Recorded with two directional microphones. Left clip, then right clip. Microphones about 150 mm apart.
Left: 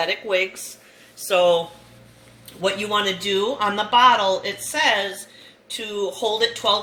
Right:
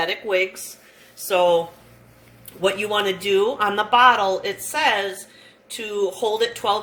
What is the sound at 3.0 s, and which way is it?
Speech, 30° right (ahead or behind).